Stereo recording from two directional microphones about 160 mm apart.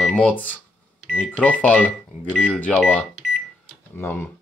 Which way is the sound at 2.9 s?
5° left (ahead or behind).